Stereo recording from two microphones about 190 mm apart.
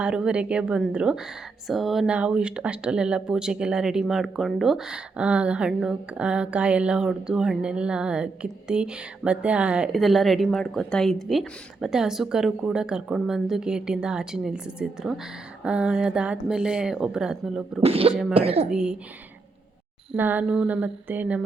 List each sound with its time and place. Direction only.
0.0 s speech: 5° right (ahead or behind)
17.8 s speech: 30° right (ahead or behind)
18.1 s speech: centre (ahead or behind)
18.3 s speech: 30° right (ahead or behind)
18.7 s speech: 5° right (ahead or behind)
20.1 s a sound: 10° right (ahead or behind)